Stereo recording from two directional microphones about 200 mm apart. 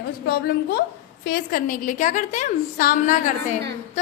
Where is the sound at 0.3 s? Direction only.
55° left (ahead or behind).